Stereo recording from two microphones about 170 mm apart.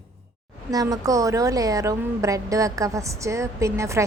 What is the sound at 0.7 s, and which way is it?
A woman's voice, 20° right (ahead or behind).